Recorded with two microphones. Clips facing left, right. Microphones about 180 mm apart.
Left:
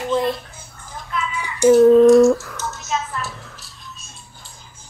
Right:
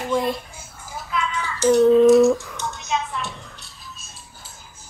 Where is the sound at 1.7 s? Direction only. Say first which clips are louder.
Left 3 dB; centre (ahead or behind).